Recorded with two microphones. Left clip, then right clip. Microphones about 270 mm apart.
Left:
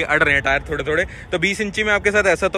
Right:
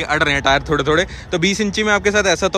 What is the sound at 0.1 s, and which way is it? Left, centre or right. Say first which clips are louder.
Speech: right 2 dB; centre.